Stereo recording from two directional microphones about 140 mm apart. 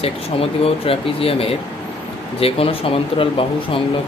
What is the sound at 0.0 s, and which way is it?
Speech, 45° left (ahead or behind).